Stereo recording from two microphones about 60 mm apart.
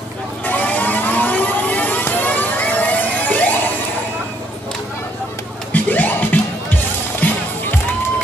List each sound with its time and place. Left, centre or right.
0.5 s vehicle: left
5.7 s music: left